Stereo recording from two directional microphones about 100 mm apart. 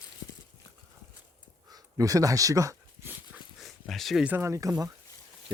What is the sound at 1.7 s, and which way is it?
Dog, 40° right (ahead or behind).